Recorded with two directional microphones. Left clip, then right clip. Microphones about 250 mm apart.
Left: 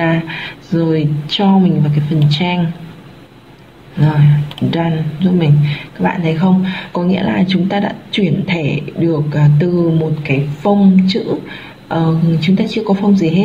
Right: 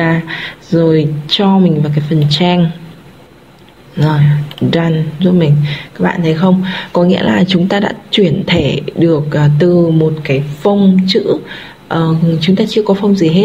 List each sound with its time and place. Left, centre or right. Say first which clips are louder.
0.0 s speech: right 2 dB; right
4.6 s speech: right 5 dB; right